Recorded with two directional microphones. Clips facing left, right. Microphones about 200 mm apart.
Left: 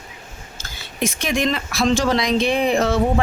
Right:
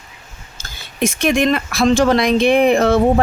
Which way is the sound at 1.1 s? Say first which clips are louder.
Right 6 dB; 60° right (ahead or behind).